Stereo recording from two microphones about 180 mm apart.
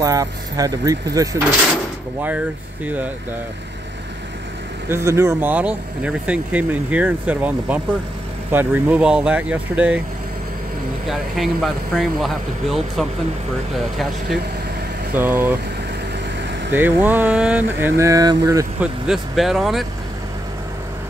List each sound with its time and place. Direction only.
0.0 s speech: 20° right (ahead or behind)
2.2 s speech: 10° right (ahead or behind)
4.8 s speech: 15° right (ahead or behind)
11.1 s speech: centre (ahead or behind)
15.1 s speech: 10° right (ahead or behind)
16.7 s speech: 10° right (ahead or behind)
18.8 s speech: centre (ahead or behind)